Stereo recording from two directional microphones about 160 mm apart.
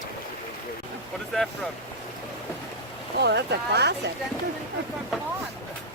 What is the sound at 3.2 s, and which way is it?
Speech, 90° right.